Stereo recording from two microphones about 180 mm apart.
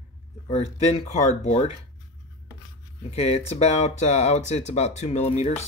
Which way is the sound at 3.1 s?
35° left (ahead or behind).